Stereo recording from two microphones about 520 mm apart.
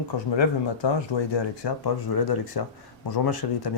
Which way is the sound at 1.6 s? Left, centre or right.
Left.